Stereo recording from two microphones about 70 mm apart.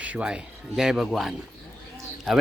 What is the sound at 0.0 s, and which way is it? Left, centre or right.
Speech, centre.